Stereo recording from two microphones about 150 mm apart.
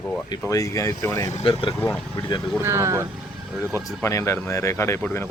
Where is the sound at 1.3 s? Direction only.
50° left (ahead or behind).